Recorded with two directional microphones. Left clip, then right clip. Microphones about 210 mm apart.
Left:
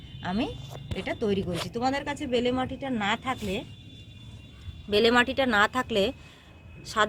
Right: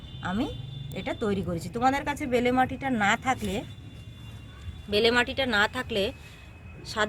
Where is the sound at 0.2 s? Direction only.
35° left (ahead or behind).